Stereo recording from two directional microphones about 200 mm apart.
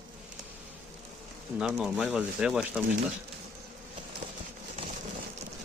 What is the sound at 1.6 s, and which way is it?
Speech, centre (ahead or behind).